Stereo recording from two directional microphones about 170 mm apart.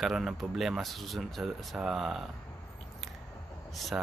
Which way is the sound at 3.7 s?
Centre (ahead or behind).